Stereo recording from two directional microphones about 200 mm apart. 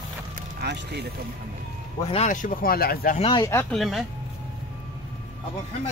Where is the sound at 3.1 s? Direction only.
25° left (ahead or behind).